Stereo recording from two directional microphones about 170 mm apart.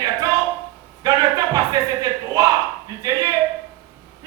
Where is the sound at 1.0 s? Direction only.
20° right (ahead or behind).